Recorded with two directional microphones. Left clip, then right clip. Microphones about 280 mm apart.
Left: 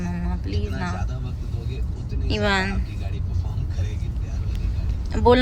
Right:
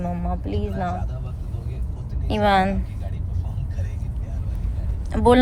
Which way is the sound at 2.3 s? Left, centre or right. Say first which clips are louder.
Right 4 dB; centre.